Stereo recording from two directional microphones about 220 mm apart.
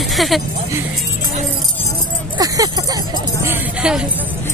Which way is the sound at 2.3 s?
15° right (ahead or behind).